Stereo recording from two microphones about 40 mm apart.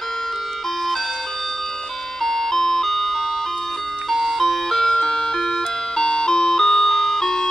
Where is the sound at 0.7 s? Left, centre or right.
Centre.